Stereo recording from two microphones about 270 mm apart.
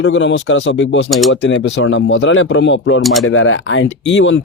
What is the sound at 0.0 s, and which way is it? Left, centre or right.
Speech, left.